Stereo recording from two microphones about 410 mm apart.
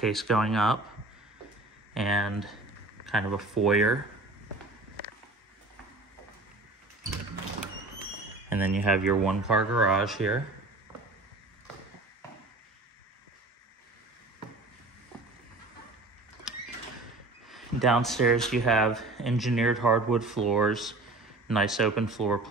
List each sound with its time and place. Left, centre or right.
0.0 s speech: centre
2.0 s speech: centre
8.5 s speech: centre
17.5 s speech: centre